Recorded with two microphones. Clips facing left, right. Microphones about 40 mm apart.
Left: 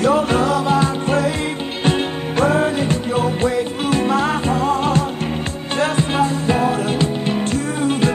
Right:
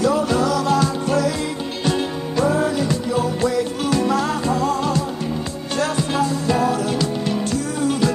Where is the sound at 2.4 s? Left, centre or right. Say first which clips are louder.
Left 2 dB; left.